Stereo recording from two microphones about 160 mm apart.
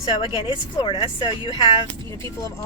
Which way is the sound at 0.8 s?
35° left (ahead or behind).